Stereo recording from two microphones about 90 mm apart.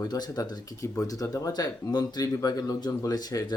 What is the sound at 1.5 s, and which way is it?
Speech, 50° left (ahead or behind).